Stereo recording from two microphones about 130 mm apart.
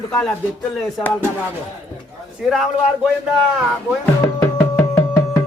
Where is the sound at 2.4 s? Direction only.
5° right (ahead or behind).